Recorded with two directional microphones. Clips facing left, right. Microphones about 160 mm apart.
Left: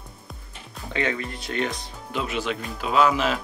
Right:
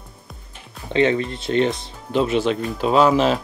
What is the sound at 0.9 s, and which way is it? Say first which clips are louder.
Speech: right 9 dB; 25° right (ahead or behind).